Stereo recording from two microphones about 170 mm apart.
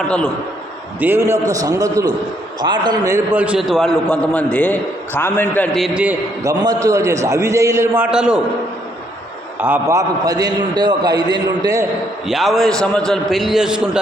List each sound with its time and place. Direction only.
0.9 s a man's voice: 10° right (ahead or behind); by 5.6 s 15° left (ahead or behind)
5.7 s a man's voice: 5° right (ahead or behind)
6.4 s a man's voice: 20° right (ahead or behind)
8.1 s a man's voice: 5° right (ahead or behind)
9.6 s a man's voice: 10° right (ahead or behind)
10.2 s a man's voice: 20° right (ahead or behind)
12.3 s a man's voice: centre (ahead or behind)